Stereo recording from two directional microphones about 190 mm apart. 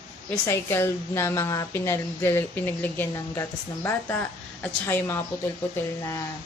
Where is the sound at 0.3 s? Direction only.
15° left (ahead or behind).